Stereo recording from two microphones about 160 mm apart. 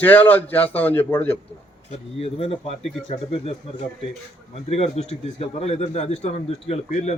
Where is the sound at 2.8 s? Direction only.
Centre (ahead or behind).